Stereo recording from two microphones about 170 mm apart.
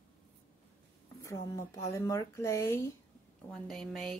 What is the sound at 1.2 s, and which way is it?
Speech, 15° left (ahead or behind).